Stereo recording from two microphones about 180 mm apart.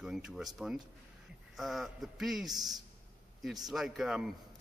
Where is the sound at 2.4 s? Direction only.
20° right (ahead or behind).